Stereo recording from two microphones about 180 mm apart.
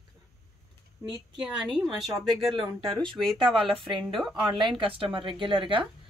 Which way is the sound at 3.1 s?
Centre (ahead or behind).